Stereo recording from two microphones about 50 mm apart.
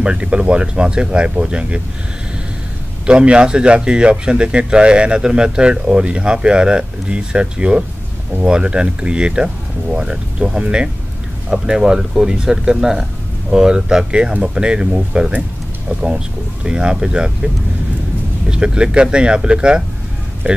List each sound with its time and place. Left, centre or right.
0.0 s speech: right
3.1 s speech: right
16.6 s speech: centre
18.5 s speech: right
20.4 s speech: right